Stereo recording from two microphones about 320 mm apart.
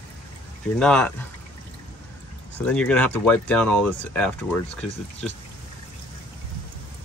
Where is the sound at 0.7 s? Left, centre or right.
Centre.